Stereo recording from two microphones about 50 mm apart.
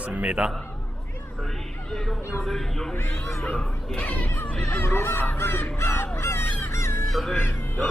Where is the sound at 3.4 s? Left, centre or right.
Left.